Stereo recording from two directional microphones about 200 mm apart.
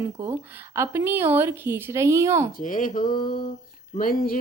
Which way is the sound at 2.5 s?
40° left (ahead or behind).